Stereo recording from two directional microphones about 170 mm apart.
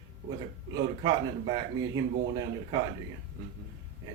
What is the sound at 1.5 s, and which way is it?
Speech, 25° right (ahead or behind).